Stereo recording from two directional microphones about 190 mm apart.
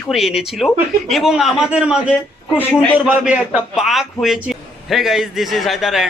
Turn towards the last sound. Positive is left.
turn(degrees=0)  # may be behind; listen again after turning